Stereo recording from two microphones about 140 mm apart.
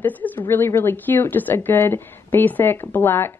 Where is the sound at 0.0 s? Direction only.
10° left (ahead or behind).